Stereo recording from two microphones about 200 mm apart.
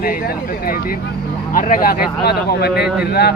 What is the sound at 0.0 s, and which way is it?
Speech, 45° left (ahead or behind).